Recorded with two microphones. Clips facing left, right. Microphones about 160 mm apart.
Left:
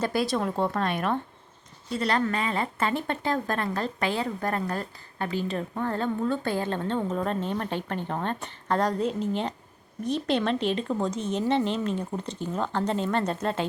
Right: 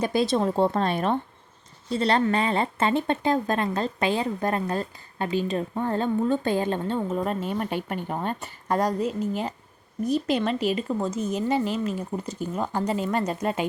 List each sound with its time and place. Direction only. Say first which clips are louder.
0.0 s a woman's voice: right 3 dB; 20° right (ahead or behind)